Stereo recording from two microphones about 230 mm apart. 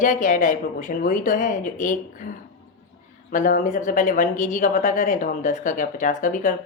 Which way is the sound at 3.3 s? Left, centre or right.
Left.